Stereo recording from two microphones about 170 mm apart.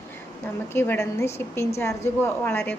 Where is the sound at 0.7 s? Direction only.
15° left (ahead or behind).